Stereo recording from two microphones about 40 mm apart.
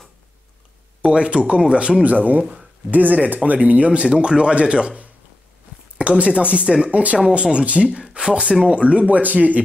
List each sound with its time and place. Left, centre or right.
1.0 s speech: right
2.0 s speech: right